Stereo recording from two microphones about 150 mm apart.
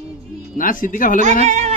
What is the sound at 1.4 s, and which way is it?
Speech, 50° right (ahead or behind).